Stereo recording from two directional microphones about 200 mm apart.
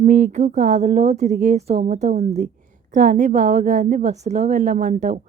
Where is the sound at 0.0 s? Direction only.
40° right (ahead or behind).